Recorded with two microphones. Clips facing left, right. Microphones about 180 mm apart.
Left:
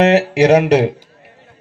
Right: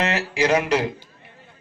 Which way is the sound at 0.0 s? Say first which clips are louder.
Left 11 dB; 65° left (ahead or behind).